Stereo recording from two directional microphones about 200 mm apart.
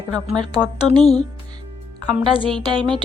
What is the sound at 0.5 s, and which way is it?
Speech, 20° right (ahead or behind).